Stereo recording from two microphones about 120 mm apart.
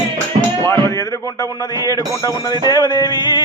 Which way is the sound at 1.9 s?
30° left (ahead or behind).